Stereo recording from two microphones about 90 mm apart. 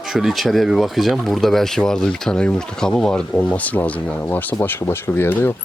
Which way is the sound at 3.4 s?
15° left (ahead or behind).